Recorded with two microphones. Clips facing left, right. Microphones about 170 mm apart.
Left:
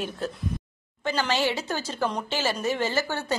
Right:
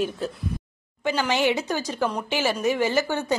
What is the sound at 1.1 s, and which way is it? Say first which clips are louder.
A woman's voice: right 3 dB; 15° right (ahead or behind).